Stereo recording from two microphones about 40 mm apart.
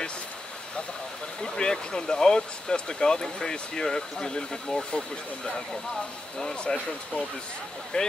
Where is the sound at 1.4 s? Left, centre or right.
Centre.